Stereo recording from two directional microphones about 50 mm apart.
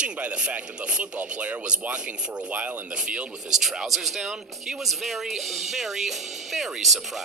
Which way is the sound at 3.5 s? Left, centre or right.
Centre.